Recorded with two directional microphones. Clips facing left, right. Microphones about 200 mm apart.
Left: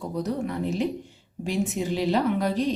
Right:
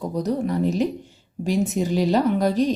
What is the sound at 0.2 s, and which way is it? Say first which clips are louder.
A woman's voice: right 5 dB; 40° right (ahead or behind).